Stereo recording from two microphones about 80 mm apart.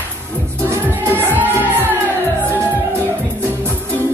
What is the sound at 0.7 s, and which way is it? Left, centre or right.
Music, right.